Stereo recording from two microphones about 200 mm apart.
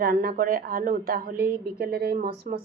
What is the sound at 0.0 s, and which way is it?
Speech, 50° right (ahead or behind).